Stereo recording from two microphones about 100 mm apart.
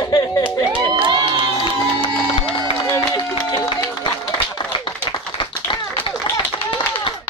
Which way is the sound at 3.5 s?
55° left (ahead or behind).